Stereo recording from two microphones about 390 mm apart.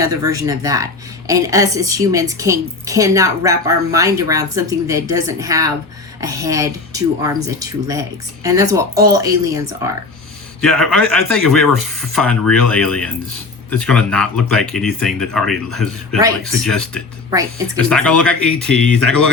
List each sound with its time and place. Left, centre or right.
0.0 s a woman's voice: centre
11.0 s speech: right
11.4 s speech: centre
11.7 s speech: right
12.1 s speech: centre
17.8 s speech: centre